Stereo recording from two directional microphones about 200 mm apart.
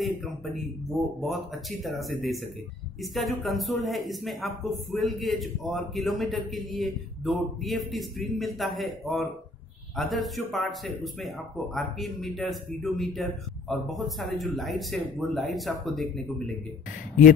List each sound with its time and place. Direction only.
1.2 s speech: centre (ahead or behind)